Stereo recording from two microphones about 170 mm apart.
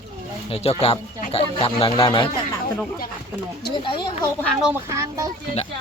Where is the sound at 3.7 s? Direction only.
30° left (ahead or behind).